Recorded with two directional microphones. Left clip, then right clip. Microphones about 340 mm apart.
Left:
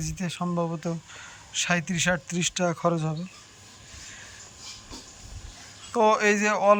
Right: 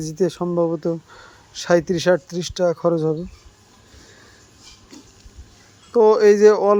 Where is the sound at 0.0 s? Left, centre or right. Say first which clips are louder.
Right 11 dB; centre.